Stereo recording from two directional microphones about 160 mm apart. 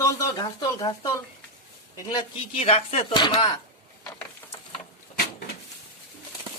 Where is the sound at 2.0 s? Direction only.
40° left (ahead or behind).